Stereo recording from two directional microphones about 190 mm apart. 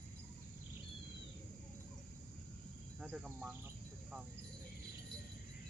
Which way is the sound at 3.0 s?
5° right (ahead or behind).